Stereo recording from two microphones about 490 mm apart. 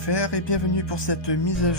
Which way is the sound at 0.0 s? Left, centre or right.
Left.